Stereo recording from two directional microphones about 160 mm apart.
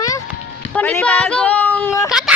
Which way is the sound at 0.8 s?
10° left (ahead or behind).